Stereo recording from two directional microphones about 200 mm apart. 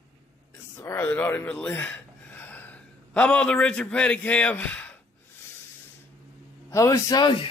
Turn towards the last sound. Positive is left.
turn(degrees=20)  # may be behind; listen again after turning